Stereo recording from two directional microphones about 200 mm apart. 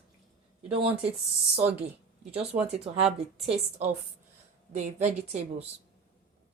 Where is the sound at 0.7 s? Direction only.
30° right (ahead or behind).